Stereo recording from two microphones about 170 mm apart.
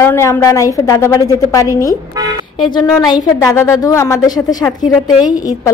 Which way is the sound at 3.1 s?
15° left (ahead or behind).